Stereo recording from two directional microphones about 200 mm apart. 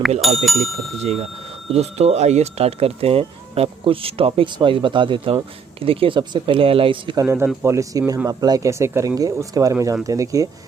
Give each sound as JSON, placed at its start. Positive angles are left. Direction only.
{"t": 0.2, "sound": "speech", "side_deg": 0}
{"t": 1.7, "sound": "speech", "side_deg": -35}
{"t": 7.3, "sound": "speech", "side_deg": -10}